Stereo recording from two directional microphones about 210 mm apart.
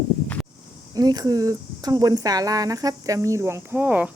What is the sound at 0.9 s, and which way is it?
A woman's voice, 20° right (ahead or behind).